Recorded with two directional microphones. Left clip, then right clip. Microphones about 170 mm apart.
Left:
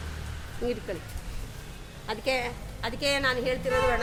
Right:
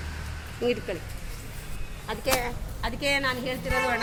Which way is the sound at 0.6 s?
10° right (ahead or behind).